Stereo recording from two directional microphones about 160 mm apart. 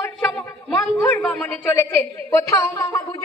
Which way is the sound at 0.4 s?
10° left (ahead or behind).